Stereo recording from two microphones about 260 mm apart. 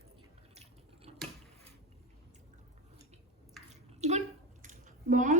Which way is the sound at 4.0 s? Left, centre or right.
Right.